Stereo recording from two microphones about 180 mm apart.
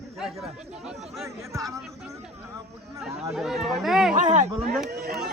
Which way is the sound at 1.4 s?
20° right (ahead or behind).